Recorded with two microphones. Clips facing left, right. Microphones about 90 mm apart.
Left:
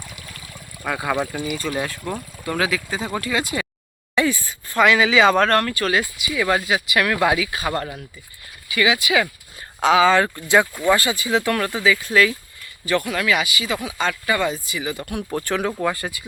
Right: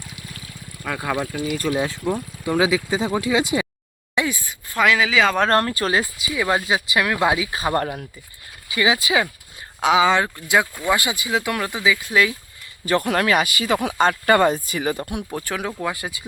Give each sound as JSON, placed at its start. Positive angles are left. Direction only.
{"t": 0.8, "sound": "speech", "side_deg": 5}
{"t": 2.0, "sound": "speech", "side_deg": -5}
{"t": 4.1, "sound": "a sound", "side_deg": -15}
{"t": 4.7, "sound": "speech", "side_deg": 0}
{"t": 5.5, "sound": "speech", "side_deg": -30}
{"t": 6.3, "sound": "speech", "side_deg": -20}
{"t": 8.7, "sound": "speech", "side_deg": -30}
{"t": 9.8, "sound": "speech", "side_deg": -15}
{"t": 10.2, "sound": "speech", "side_deg": -5}
{"t": 12.8, "sound": "speech", "side_deg": -40}
{"t": 15.3, "sound": "speech", "side_deg": -5}